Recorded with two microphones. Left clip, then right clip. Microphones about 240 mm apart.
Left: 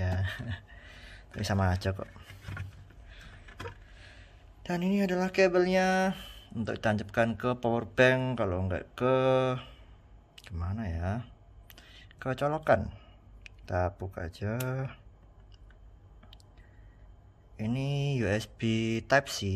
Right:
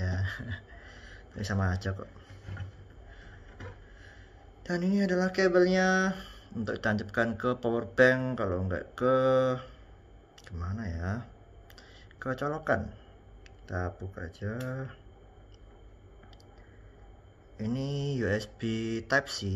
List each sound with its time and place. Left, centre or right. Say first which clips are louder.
0.0 s a sound: left 1 dB; left
4.6 s speech: right 1 dB; left
17.6 s speech: even; left